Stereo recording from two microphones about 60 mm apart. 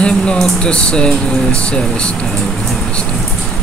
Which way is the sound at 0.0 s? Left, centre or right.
Centre.